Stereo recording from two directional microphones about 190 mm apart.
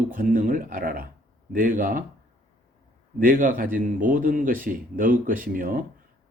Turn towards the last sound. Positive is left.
turn(degrees=-45)  # may be behind; listen again after turning